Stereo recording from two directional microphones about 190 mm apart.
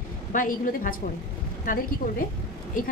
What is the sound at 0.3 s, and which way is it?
A woman's voice, 45° left (ahead or behind).